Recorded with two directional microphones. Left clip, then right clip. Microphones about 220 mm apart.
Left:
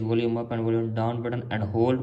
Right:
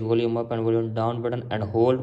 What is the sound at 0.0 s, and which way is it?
A man's voice, 15° right (ahead or behind).